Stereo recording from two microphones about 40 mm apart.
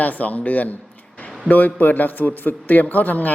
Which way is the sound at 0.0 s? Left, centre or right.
Left.